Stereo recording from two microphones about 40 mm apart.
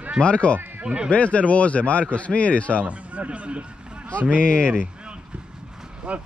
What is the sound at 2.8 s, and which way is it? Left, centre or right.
Speech, right.